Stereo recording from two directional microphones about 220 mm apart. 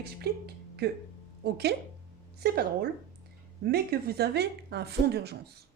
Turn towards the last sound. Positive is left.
turn(degrees=-50)  # may be behind; listen again after turning